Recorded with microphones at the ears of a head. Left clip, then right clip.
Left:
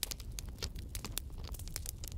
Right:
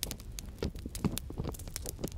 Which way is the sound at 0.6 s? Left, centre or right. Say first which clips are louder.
Right 10 dB; right.